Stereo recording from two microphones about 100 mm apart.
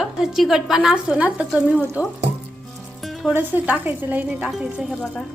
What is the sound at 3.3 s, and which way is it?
A woman's voice, 20° right (ahead or behind).